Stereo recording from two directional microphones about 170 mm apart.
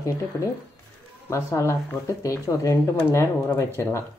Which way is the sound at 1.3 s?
15° left (ahead or behind).